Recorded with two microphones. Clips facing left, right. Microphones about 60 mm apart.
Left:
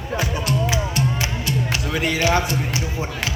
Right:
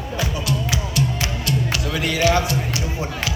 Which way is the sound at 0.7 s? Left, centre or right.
Left.